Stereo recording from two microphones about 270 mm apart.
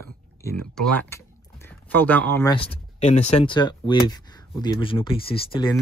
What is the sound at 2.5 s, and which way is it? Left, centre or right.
Speech, left.